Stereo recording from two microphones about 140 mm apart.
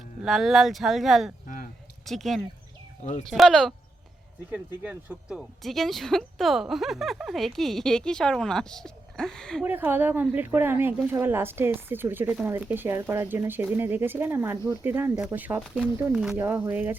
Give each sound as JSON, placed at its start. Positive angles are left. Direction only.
{"t": 0.3, "sound": "speech", "side_deg": 0}
{"t": 3.0, "sound": "speech", "side_deg": 55}
{"t": 3.2, "sound": "speech", "side_deg": 0}
{"t": 4.5, "sound": "speech", "side_deg": -10}
{"t": 9.6, "sound": "a woman's voice", "side_deg": -15}